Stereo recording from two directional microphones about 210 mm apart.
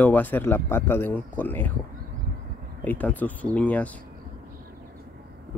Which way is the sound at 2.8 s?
10° left (ahead or behind).